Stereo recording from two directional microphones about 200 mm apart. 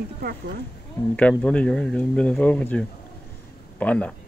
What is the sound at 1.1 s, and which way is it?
Speech, 5° left (ahead or behind).